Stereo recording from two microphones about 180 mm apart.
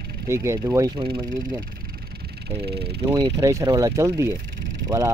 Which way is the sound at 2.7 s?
65° right (ahead or behind).